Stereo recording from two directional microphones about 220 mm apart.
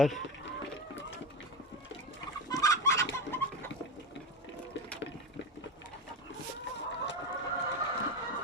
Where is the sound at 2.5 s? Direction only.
15° left (ahead or behind).